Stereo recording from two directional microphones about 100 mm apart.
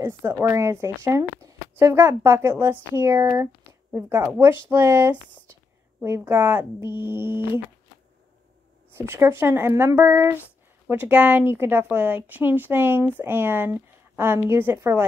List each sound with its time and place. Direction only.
0.0 s a woman's voice: 25° right (ahead or behind)
8.9 s a woman's voice: 25° right (ahead or behind)